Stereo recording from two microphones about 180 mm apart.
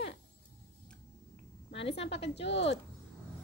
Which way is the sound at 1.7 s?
30° left (ahead or behind).